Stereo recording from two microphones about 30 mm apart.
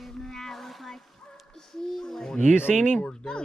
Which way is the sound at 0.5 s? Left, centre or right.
Centre.